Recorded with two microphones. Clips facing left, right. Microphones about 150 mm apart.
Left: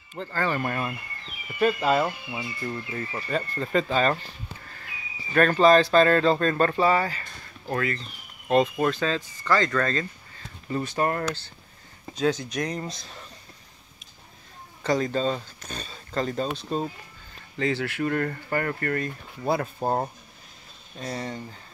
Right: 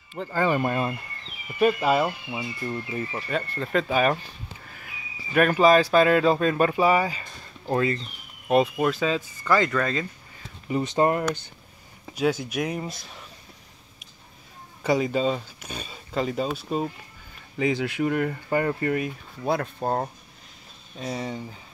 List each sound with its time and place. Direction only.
0.3 s speech: 15° right (ahead or behind)
1.6 s speech: 10° right (ahead or behind)
3.3 s speech: centre (ahead or behind); by 8.0 s 20° right (ahead or behind)
8.5 s speech: 5° right (ahead or behind)
10.7 s speech: 20° right (ahead or behind)
14.8 s speech: 10° right (ahead or behind)
19.4 s speech: 5° left (ahead or behind)